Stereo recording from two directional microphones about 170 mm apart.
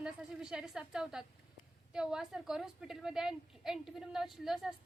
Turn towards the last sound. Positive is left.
turn(degrees=0)  # may be behind; listen again after turning